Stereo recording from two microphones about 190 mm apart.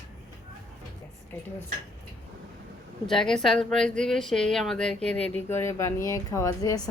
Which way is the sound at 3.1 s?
5° left (ahead or behind).